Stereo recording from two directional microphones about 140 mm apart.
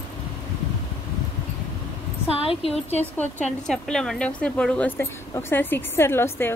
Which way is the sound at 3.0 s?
10° left (ahead or behind).